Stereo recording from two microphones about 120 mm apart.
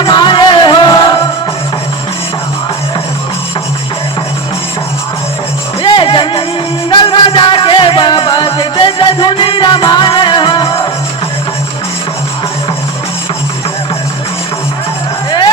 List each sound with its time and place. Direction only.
0.0 s music: 40° left (ahead or behind)
5.8 s music: 45° left (ahead or behind)
15.3 s music: 40° left (ahead or behind)